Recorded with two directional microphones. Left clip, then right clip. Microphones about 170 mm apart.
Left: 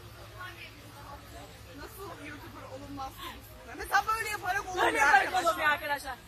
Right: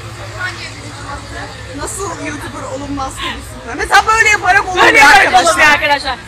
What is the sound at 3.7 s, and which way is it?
Speech, 20° right (ahead or behind).